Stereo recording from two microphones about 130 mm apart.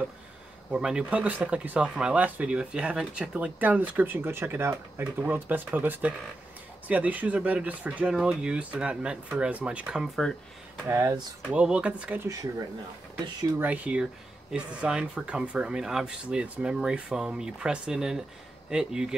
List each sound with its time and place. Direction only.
0.7 s speech: 5° right (ahead or behind)
10.9 s speech: 20° right (ahead or behind)
11.4 s speech: 10° right (ahead or behind)
13.6 s speech: 10° right (ahead or behind)